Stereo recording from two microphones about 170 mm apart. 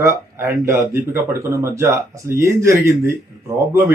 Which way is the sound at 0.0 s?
15° right (ahead or behind).